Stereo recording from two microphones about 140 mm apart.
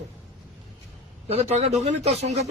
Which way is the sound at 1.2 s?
50° right (ahead or behind).